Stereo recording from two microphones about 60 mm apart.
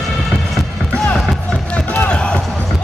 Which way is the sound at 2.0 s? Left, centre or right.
Centre.